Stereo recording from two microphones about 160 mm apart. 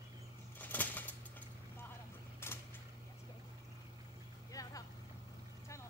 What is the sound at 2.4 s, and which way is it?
Mechanisms, 15° left (ahead or behind).